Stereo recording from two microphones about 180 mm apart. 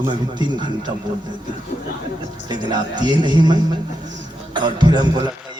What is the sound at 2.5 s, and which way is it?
Speech, 25° right (ahead or behind).